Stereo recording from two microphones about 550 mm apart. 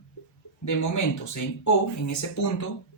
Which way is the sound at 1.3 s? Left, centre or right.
Left.